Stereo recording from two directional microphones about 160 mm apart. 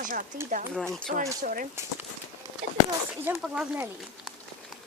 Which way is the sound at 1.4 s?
60° right (ahead or behind).